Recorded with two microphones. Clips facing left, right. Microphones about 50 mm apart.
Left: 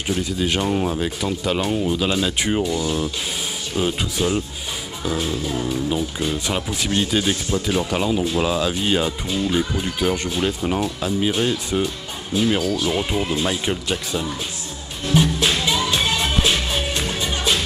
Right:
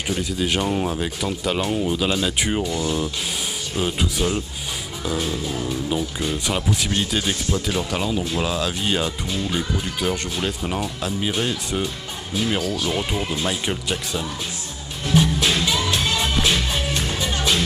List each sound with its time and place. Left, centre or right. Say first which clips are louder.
0.1 s speech: left 1 dB; centre
5.6 s speech: left 2 dB; centre
15.1 s music: even; centre